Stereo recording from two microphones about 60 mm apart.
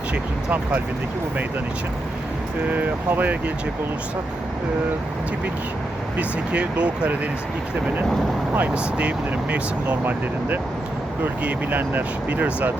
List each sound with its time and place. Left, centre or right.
0.1 s speech: right
2.7 s speech: right
6.1 s speech: right
8.5 s speech: right
9.8 s speech: right